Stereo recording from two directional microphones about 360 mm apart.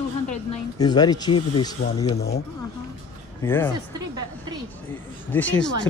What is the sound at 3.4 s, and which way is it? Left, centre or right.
Speech, centre.